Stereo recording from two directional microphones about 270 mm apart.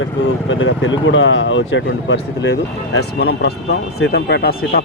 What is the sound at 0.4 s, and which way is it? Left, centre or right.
Speech, left.